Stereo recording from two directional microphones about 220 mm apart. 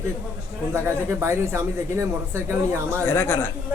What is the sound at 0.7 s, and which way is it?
Speech, 10° right (ahead or behind).